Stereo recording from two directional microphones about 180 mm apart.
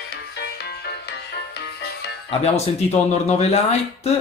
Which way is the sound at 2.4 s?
35° left (ahead or behind).